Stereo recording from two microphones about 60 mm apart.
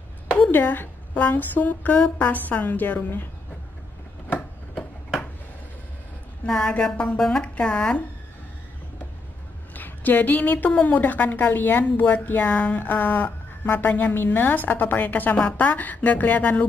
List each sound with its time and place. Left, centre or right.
0.4 s a woman's voice: left
6.4 s a woman's voice: centre
9.8 s a woman's voice: left